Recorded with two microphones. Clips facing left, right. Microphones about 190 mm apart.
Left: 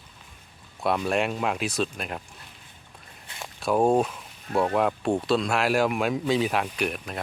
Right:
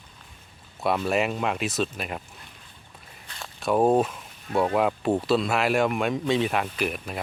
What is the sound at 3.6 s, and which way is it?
Speech, centre (ahead or behind).